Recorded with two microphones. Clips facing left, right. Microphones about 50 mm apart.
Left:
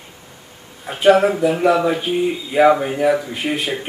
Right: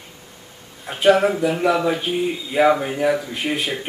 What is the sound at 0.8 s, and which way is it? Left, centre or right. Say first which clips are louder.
Speech: left 2 dB; centre.